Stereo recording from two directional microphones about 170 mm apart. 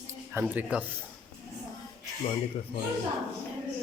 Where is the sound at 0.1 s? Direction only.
10° right (ahead or behind).